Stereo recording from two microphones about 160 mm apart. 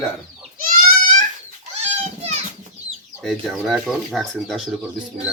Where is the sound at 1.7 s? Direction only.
45° right (ahead or behind).